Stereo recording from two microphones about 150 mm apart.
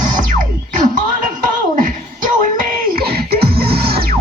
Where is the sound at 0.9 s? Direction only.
60° right (ahead or behind).